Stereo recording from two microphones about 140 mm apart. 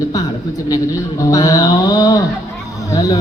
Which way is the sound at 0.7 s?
25° left (ahead or behind).